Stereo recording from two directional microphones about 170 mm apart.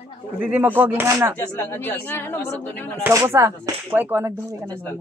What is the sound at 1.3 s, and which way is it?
Speech, 10° left (ahead or behind).